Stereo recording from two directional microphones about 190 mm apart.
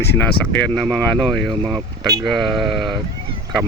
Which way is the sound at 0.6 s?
5° left (ahead or behind).